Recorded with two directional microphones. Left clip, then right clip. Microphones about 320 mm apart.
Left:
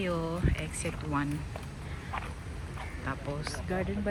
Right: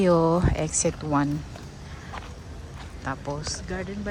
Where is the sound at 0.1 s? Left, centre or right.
Right.